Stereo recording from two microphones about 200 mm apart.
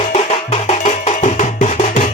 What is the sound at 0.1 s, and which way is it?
Music, 35° left (ahead or behind).